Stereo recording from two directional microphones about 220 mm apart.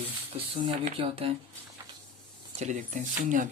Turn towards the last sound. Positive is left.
turn(degrees=-35)  # may be behind; listen again after turning